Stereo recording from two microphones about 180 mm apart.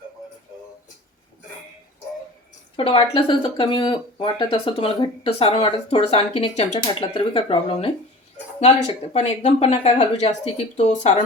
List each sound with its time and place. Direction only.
2.7 s speech: 30° left (ahead or behind)
6.7 s speech: 25° left (ahead or behind)
9.1 s speech: 40° left (ahead or behind)